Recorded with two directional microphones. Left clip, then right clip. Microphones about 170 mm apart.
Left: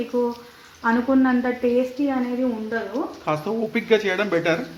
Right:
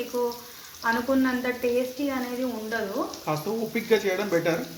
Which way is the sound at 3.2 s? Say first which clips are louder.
Left 8 dB; centre (ahead or behind).